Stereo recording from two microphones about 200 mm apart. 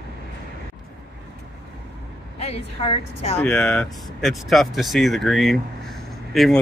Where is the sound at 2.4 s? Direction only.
30° left (ahead or behind).